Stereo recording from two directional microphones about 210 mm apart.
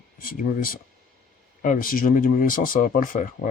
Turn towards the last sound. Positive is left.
turn(degrees=40)  # may be behind; listen again after turning